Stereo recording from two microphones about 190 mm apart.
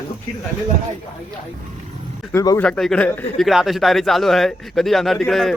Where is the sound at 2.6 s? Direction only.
5° left (ahead or behind).